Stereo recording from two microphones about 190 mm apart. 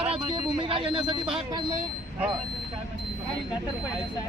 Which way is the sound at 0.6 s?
25° right (ahead or behind).